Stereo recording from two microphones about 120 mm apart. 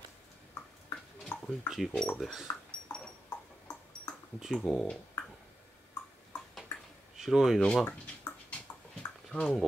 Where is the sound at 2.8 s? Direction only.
15° left (ahead or behind).